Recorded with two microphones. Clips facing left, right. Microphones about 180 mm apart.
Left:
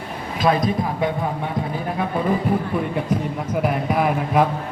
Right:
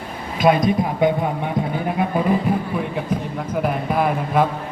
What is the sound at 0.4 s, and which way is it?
Speech, 20° right (ahead or behind).